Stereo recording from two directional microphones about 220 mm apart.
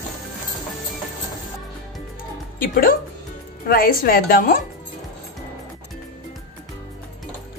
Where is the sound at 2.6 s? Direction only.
40° left (ahead or behind).